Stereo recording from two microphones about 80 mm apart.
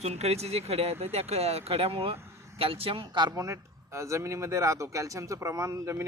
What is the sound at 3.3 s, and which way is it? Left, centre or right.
Speech, right.